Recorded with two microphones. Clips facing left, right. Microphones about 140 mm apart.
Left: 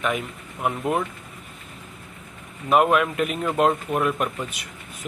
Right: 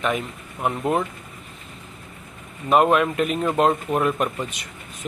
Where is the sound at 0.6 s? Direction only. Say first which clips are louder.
Right 1 dB; 5° left (ahead or behind).